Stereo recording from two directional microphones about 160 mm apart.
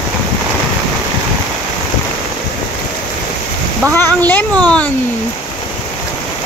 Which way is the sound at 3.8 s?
10° left (ahead or behind).